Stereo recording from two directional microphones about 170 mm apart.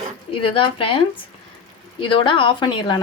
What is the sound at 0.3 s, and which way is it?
Speech, 30° left (ahead or behind).